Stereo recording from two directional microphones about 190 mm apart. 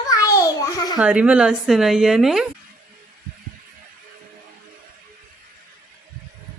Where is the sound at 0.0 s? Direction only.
20° left (ahead or behind).